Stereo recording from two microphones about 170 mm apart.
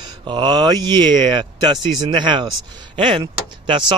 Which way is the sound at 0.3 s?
25° right (ahead or behind).